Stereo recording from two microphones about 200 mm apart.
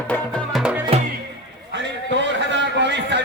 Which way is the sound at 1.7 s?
60° right (ahead or behind).